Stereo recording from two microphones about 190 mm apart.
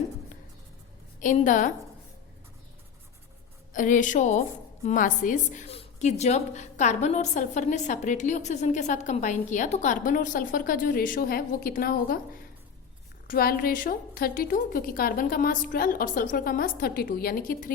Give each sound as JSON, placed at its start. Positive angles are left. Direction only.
{"t": 1.2, "sound": "a woman's voice", "side_deg": 40}
{"t": 3.7, "sound": "a woman's voice", "side_deg": 45}